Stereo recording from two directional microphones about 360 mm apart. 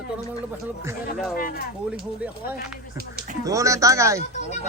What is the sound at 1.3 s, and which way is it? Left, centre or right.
Speech, left.